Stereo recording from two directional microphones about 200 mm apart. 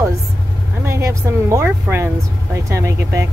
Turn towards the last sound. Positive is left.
turn(degrees=-15)  # may be behind; listen again after turning